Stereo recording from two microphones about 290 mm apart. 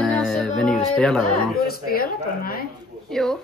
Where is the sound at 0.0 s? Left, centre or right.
Centre.